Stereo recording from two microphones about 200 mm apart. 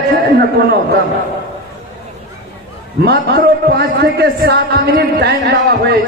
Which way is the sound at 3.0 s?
50° right (ahead or behind).